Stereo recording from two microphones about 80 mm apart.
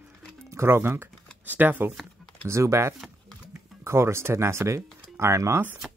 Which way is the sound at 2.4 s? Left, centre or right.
Right.